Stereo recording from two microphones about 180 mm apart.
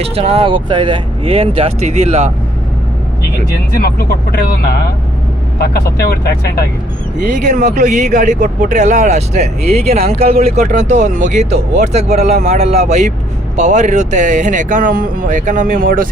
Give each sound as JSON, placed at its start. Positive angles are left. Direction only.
{"t": 0.0, "sound": "speech", "side_deg": -35}
{"t": 3.7, "sound": "speech", "side_deg": 55}
{"t": 7.2, "sound": "speech", "side_deg": -45}